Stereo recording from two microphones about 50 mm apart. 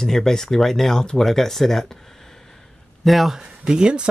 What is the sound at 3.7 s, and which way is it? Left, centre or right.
Speech, centre.